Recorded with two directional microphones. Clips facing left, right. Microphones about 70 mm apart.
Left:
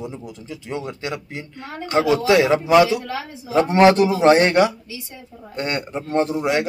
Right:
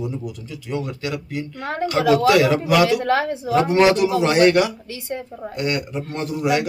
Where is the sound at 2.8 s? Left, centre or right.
Right.